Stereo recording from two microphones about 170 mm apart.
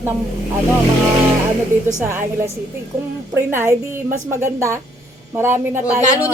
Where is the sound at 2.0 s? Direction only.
15° right (ahead or behind).